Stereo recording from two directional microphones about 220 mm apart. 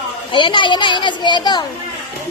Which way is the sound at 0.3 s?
20° left (ahead or behind).